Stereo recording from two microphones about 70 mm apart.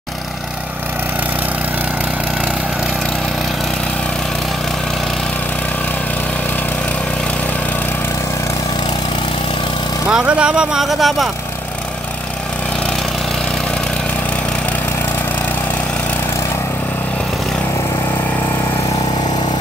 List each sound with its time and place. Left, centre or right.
10.1 s speech: centre